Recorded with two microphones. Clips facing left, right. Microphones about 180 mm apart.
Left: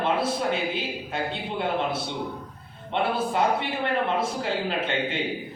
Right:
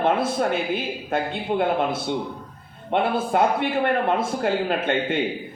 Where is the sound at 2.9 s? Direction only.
50° right (ahead or behind).